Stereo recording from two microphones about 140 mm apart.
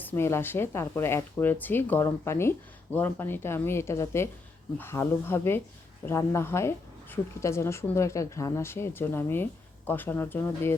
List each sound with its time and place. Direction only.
0.0 s speech: 15° left (ahead or behind)